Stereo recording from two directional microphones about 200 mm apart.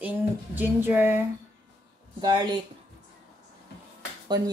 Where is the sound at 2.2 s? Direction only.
20° right (ahead or behind).